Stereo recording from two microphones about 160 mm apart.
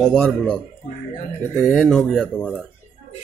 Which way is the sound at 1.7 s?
5° left (ahead or behind).